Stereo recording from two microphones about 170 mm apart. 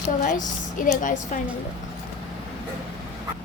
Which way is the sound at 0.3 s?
50° left (ahead or behind).